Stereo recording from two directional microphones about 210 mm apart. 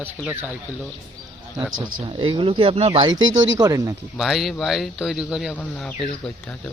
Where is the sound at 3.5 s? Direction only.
15° right (ahead or behind).